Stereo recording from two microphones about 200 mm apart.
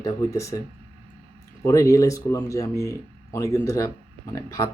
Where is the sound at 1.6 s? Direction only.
15° left (ahead or behind).